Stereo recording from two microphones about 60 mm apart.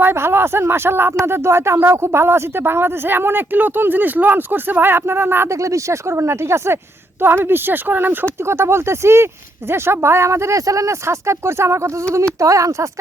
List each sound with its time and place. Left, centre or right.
0.0 s speech: right
5.5 s speech: right
7.2 s speech: right
12.4 s speech: right